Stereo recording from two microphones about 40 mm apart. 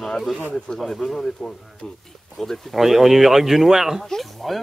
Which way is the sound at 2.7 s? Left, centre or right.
Centre.